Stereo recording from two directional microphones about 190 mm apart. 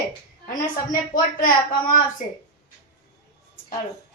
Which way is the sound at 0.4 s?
45° left (ahead or behind).